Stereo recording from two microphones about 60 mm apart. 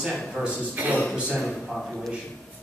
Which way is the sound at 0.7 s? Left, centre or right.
Right.